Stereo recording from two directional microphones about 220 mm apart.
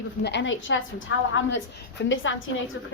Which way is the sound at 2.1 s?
60° left (ahead or behind).